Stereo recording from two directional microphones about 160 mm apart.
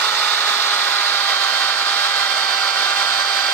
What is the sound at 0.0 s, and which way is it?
Tools, 10° left (ahead or behind).